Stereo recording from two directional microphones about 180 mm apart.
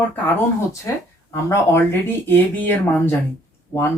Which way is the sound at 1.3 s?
15° left (ahead or behind).